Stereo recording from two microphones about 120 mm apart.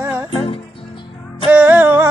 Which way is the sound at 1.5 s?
15° right (ahead or behind).